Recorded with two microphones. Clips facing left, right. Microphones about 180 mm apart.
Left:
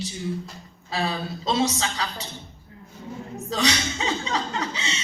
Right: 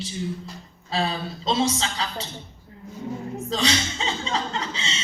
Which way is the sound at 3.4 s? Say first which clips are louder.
Left 1 dB; 30° right (ahead or behind).